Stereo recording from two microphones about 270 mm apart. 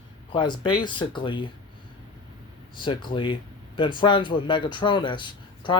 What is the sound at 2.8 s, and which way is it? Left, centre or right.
Speech, centre.